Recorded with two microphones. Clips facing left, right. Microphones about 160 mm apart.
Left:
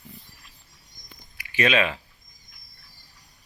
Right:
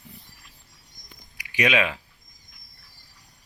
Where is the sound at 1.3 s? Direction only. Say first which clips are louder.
Left 1 dB; 15° right (ahead or behind).